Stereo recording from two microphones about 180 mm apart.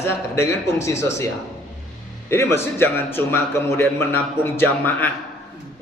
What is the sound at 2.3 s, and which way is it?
Speech, 15° left (ahead or behind).